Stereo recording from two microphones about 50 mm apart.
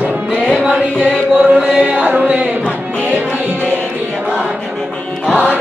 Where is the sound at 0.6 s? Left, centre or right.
Centre.